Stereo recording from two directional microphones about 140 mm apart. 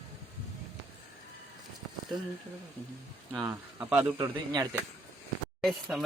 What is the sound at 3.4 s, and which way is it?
Speech, 10° right (ahead or behind).